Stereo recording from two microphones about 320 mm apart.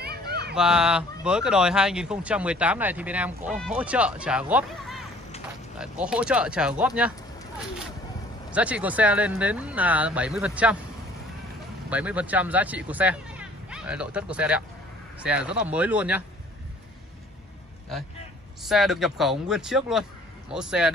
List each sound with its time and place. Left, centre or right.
0.0 s a sound: right
0.6 s speech: centre
8.5 s speech: centre
11.9 s speech: centre
18.6 s speech: centre